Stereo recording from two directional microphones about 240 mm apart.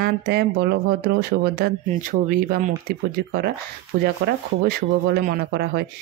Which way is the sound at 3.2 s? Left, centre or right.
Right.